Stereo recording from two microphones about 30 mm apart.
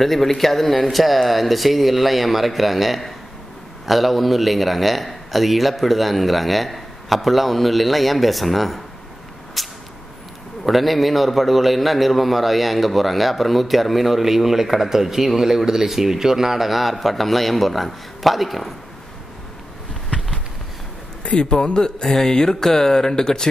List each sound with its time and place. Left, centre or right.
0.0 s a man's voice: centre
9.6 s whip: centre
10.6 s a man's voice: centre
21.2 s a sound: left
21.6 s mantra: left